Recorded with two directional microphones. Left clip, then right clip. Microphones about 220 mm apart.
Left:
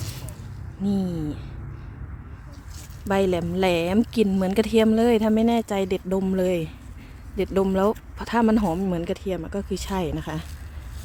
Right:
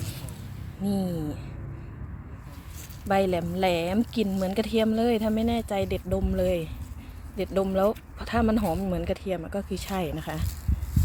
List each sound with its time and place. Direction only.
0.9 s speech: 15° left (ahead or behind)
3.1 s speech: 25° left (ahead or behind)